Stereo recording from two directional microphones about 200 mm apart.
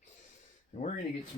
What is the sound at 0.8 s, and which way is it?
Speech, 35° left (ahead or behind).